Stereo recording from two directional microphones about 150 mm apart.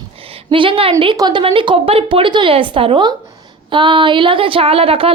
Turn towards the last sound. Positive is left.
turn(degrees=-40)  # may be behind; listen again after turning